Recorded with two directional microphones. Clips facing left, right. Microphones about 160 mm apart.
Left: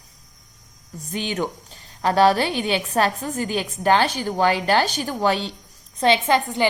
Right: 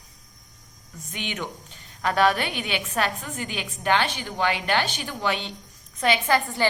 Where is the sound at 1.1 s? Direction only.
35° left (ahead or behind); by 6.7 s 15° left (ahead or behind).